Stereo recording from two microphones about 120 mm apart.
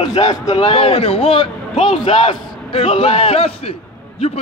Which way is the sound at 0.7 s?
55° left (ahead or behind).